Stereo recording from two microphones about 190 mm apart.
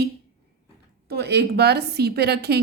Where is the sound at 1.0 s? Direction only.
60° right (ahead or behind).